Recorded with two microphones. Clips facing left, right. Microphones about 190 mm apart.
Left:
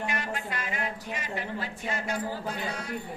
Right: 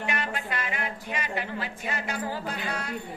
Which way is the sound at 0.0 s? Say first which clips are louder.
Right 1 dB; 70° right (ahead or behind).